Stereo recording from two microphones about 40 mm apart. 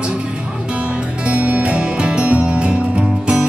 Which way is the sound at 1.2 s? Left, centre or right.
Right.